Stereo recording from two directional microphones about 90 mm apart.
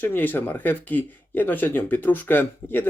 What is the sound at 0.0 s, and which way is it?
Speech, 20° left (ahead or behind).